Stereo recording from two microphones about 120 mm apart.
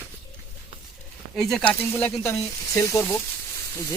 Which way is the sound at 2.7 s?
25° left (ahead or behind).